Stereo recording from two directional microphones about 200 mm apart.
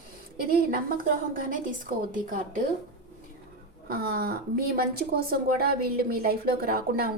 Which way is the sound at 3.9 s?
50° right (ahead or behind).